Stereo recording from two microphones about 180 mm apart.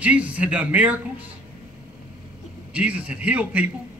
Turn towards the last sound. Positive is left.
turn(degrees=-10)  # may be behind; listen again after turning